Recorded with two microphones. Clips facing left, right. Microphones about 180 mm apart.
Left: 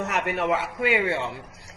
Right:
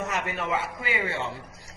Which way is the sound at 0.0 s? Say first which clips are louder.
Left 4 dB; 70° left (ahead or behind).